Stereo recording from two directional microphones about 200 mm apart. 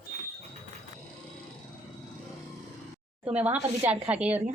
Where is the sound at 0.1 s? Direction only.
35° right (ahead or behind).